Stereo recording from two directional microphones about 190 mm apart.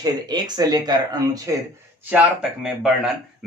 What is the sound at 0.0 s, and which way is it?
Speech, 20° right (ahead or behind).